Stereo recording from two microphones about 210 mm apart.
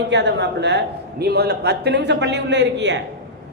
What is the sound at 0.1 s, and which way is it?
A man's voice, 55° right (ahead or behind).